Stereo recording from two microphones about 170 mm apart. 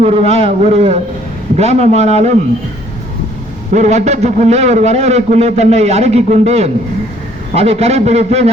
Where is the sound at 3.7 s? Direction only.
40° right (ahead or behind).